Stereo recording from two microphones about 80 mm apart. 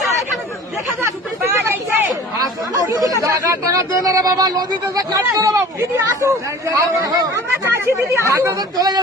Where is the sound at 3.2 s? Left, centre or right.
Right.